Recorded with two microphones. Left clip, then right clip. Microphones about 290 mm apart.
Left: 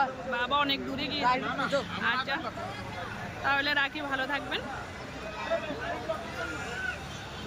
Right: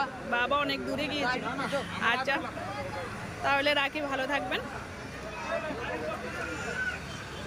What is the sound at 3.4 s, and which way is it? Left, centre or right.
Speech, centre.